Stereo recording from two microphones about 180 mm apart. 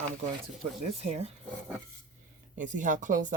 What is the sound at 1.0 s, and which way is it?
Speech, 35° right (ahead or behind).